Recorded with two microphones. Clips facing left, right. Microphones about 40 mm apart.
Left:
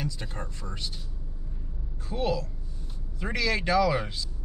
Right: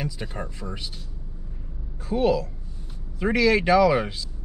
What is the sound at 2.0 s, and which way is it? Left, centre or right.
Speech, centre.